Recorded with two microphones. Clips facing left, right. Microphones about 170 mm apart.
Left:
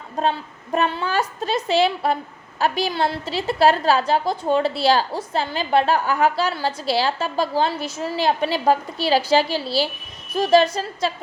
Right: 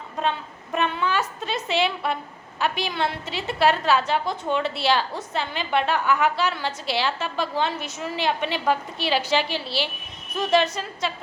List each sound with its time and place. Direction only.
0.2 s a woman's voice: 35° left (ahead or behind)